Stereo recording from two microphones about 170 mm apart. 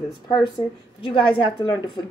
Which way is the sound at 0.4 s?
30° left (ahead or behind).